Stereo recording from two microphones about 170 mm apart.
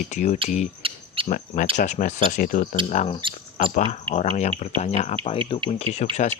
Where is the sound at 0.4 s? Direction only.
45° left (ahead or behind).